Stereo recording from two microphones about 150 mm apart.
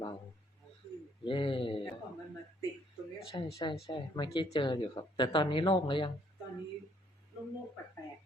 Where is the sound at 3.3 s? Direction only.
30° left (ahead or behind).